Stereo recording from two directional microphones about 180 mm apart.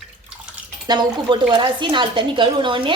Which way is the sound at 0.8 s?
25° right (ahead or behind).